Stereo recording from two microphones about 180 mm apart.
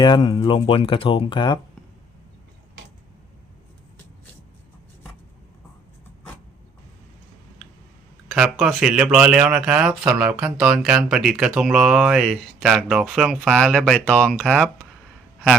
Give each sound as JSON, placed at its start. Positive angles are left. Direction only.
{"t": 0.0, "sound": "speech", "side_deg": 25}
{"t": 8.3, "sound": "speech", "side_deg": -5}